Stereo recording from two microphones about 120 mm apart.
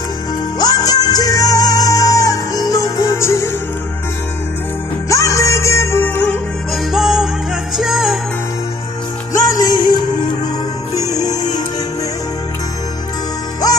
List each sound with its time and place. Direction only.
0.6 s music: 35° left (ahead or behind)
5.1 s music: 25° left (ahead or behind)
6.7 s music: centre (ahead or behind)
9.3 s music: 30° left (ahead or behind)